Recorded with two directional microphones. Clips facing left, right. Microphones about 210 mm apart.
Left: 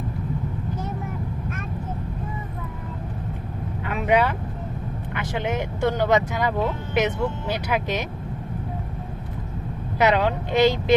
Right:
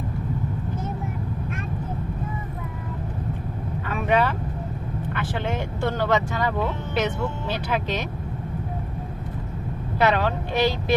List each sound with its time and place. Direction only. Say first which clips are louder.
3.8 s vehicle: left 1 dB; 15° left (ahead or behind)
5.1 s speech: left 2 dB; 15° left (ahead or behind)
10.0 s speech: left 2 dB; 15° left (ahead or behind)